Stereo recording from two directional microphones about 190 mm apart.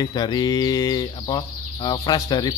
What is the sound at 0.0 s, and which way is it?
Speech, 20° left (ahead or behind).